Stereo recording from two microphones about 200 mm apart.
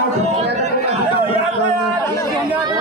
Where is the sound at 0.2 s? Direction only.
30° right (ahead or behind).